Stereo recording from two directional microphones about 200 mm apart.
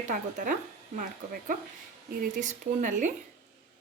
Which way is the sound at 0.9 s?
40° right (ahead or behind).